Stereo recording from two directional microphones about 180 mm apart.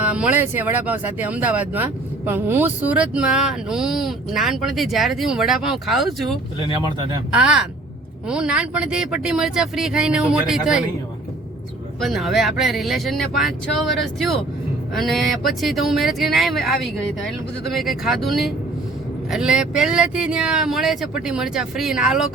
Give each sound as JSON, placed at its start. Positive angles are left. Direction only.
{"t": 0.0, "sound": "speech", "side_deg": -10}
{"t": 11.9, "sound": "speech", "side_deg": 0}